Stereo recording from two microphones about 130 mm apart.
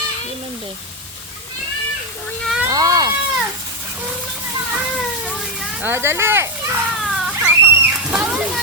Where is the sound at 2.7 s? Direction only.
30° right (ahead or behind).